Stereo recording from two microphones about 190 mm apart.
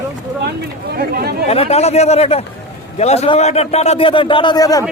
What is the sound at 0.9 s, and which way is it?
Speech, 55° right (ahead or behind).